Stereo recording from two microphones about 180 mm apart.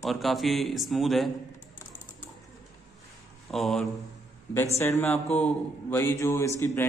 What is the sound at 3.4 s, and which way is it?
Speech, centre (ahead or behind).